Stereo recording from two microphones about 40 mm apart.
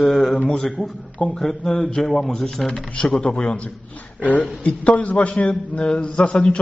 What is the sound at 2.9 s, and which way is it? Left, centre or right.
A man's voice, left.